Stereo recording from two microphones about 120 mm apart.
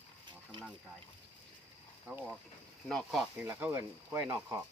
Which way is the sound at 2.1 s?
10° right (ahead or behind).